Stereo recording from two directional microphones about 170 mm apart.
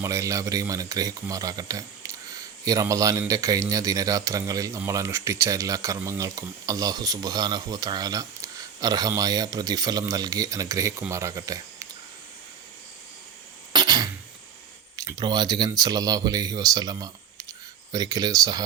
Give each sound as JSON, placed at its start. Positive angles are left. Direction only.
{"t": 0.0, "sound": "speech", "side_deg": -20}
{"t": 13.7, "sound": "cough", "side_deg": -25}
{"t": 14.9, "sound": "speech", "side_deg": -20}